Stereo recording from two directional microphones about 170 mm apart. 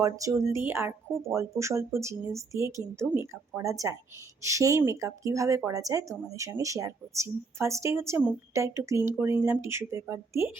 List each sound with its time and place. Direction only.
0.0 s speech: 20° right (ahead or behind)